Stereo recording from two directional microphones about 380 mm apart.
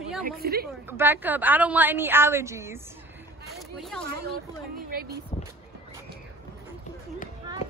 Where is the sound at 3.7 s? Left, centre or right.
Centre.